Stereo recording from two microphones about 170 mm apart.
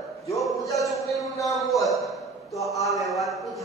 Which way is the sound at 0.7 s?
Centre (ahead or behind).